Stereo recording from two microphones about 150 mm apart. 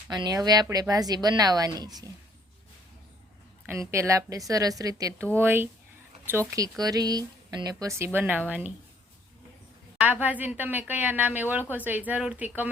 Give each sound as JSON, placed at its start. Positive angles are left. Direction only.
{"t": 0.1, "sound": "speech", "side_deg": -25}
{"t": 3.7, "sound": "speech", "side_deg": -20}
{"t": 10.0, "sound": "speech", "side_deg": -10}